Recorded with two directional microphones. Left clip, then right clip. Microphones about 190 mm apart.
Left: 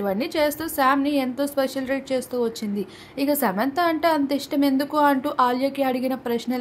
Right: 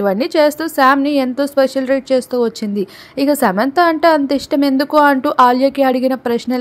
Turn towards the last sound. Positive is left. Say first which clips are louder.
# right 8 dB
turn(degrees=-40)  # may be behind; listen again after turning